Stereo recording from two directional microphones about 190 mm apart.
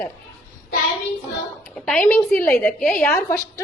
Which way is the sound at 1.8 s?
5° left (ahead or behind).